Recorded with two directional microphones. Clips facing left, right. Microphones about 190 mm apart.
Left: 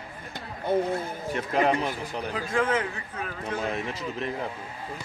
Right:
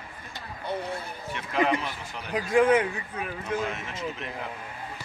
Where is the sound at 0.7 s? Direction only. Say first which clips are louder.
Left 8 dB; 50° left (ahead or behind).